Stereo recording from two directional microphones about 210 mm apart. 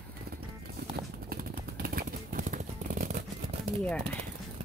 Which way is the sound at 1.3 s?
45° right (ahead or behind).